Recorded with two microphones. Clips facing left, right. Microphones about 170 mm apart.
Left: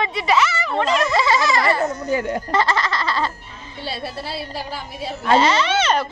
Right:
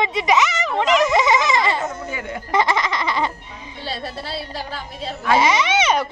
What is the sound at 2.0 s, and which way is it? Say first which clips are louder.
Speech: left 7 dB; 35° left (ahead or behind).